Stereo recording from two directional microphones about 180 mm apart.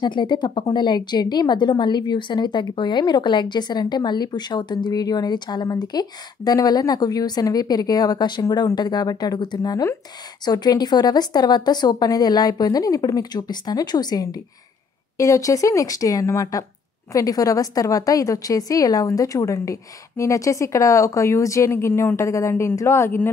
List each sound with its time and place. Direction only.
0.0 s a woman's voice: 25° left (ahead or behind)